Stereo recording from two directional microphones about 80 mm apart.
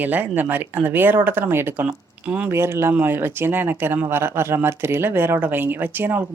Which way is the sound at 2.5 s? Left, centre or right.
Right.